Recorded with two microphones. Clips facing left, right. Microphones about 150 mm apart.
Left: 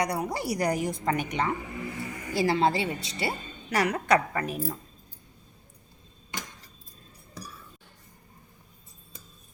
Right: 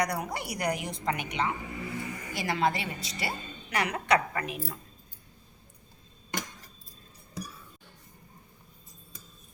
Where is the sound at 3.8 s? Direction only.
40° left (ahead or behind).